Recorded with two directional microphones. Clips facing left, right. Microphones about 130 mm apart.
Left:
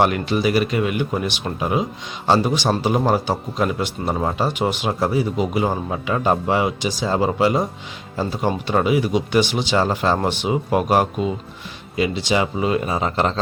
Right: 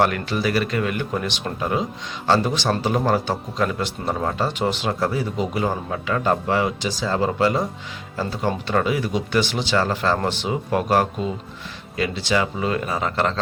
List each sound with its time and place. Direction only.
0.0 s speech: 15° left (ahead or behind)